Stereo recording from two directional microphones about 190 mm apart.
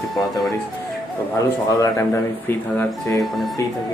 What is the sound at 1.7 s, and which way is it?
Speech, 15° left (ahead or behind).